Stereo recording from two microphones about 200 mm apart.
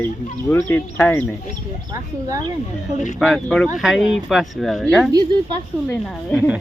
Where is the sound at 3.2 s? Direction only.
Centre (ahead or behind).